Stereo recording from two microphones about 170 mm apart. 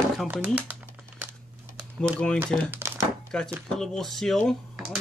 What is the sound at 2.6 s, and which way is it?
Thunk, 15° right (ahead or behind).